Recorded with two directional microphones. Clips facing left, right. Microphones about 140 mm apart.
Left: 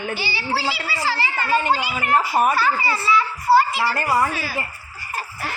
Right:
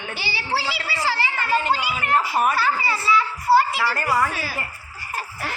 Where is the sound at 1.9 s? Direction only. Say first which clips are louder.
Left 2 dB; 45° left (ahead or behind).